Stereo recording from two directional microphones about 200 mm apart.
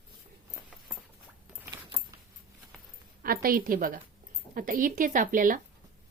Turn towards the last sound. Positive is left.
turn(degrees=-40)  # may be behind; listen again after turning